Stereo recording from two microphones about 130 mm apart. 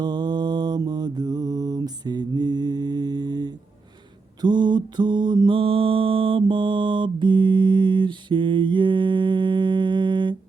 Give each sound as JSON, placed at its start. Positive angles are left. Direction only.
{"t": 0.0, "sound": "mantra", "side_deg": -35}